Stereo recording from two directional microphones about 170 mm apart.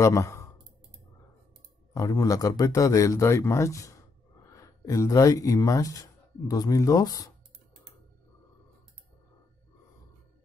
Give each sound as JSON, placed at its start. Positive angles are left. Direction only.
{"t": 0.0, "sound": "speech", "side_deg": 15}
{"t": 2.0, "sound": "a man's voice", "side_deg": 20}